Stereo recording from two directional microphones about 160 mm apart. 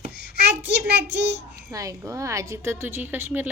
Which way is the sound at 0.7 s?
90° right.